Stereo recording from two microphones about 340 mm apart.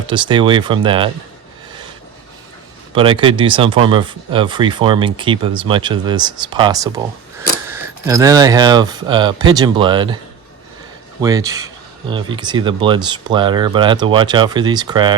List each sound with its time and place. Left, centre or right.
0.1 s speech: centre
2.9 s speech: centre
11.2 s speech: centre